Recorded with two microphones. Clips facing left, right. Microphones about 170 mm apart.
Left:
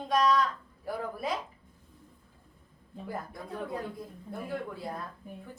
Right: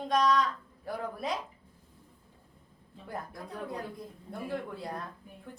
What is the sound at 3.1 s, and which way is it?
Speech, centre (ahead or behind).